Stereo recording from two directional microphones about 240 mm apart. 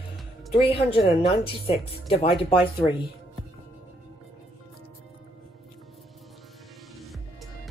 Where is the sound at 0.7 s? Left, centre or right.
Left.